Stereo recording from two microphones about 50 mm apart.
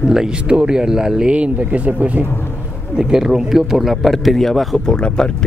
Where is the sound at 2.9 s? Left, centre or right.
Centre.